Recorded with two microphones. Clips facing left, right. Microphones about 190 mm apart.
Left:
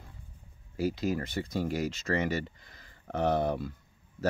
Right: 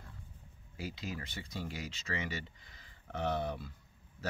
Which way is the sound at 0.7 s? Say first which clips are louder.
Left 12 dB; 40° left (ahead or behind).